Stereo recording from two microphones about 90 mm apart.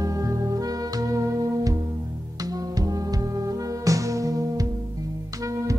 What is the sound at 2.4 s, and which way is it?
Music, 45° right (ahead or behind).